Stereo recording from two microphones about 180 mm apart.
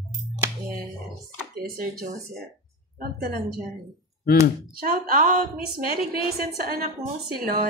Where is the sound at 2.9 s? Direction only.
50° right (ahead or behind).